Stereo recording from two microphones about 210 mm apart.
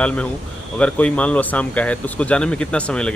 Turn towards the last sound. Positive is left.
turn(degrees=5)  # may be behind; listen again after turning